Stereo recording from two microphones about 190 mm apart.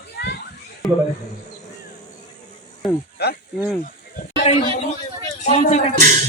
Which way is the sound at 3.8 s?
45° left (ahead or behind).